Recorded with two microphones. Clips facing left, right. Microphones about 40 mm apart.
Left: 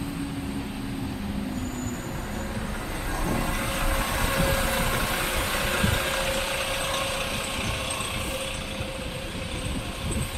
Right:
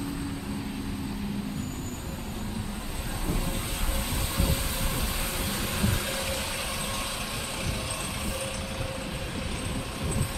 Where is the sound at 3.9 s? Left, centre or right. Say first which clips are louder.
Left 6 dB; left.